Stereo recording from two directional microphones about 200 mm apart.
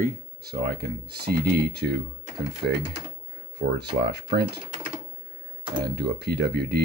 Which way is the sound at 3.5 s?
55° right (ahead or behind).